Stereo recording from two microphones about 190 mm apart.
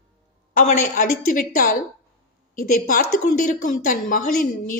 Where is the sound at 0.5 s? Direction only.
45° left (ahead or behind).